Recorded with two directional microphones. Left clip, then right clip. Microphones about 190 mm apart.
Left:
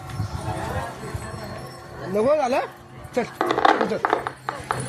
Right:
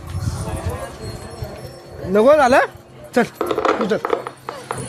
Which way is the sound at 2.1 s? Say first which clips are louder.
Right 8 dB; 55° right (ahead or behind).